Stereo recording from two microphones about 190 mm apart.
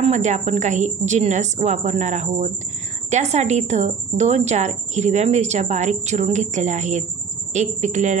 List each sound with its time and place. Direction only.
0.0 s a woman's voice: 40° right (ahead or behind)